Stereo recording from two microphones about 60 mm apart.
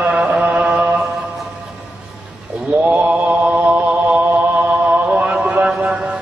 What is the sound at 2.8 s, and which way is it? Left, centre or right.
Mantra, right.